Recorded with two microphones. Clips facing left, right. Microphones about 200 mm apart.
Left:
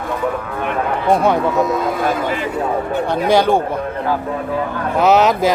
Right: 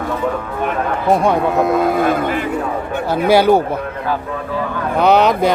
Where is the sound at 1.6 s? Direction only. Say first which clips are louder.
Right 3 dB; 60° right (ahead or behind).